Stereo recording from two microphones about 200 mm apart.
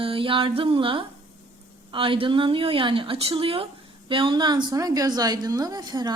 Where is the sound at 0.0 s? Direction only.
25° right (ahead or behind).